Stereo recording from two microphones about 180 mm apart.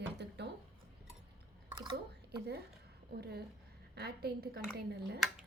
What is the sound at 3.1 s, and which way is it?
A woman's voice, 65° right (ahead or behind).